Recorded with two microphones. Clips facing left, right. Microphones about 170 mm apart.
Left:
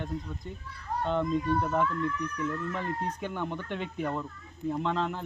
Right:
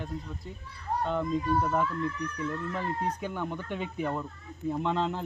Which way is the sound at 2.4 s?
10° right (ahead or behind).